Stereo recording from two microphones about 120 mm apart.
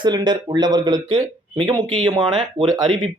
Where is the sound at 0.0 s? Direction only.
35° right (ahead or behind).